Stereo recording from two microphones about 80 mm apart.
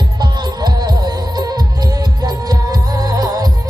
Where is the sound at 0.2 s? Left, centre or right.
Right.